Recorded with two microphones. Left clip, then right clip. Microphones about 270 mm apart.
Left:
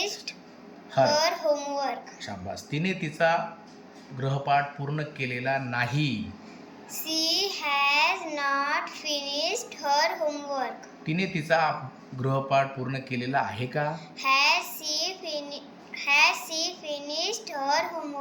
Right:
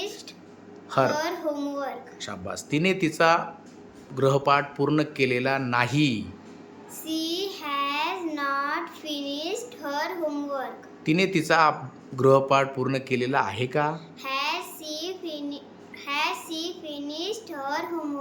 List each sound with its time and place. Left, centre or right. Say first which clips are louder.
0.9 s a child's voice: left 1 dB; centre
7.0 s a child's voice: left 3 dB; centre